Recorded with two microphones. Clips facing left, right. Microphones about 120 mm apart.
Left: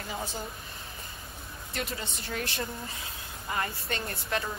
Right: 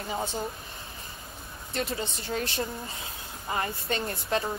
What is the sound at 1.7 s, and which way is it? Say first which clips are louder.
Speech: right 5 dB; 30° right (ahead or behind).